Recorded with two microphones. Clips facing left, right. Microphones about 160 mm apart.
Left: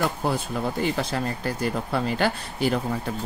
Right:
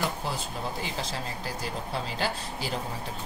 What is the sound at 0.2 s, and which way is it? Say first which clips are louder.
Speech: left 7 dB; 60° left (ahead or behind).